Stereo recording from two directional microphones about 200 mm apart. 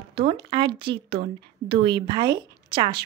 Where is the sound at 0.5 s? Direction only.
20° right (ahead or behind).